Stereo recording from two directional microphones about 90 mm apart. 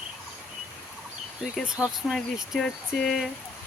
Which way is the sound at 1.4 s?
5° right (ahead or behind).